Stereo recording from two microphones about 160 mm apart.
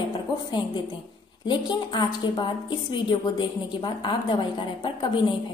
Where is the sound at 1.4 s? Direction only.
30° left (ahead or behind).